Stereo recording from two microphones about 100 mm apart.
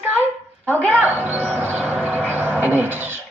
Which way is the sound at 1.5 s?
15° right (ahead or behind).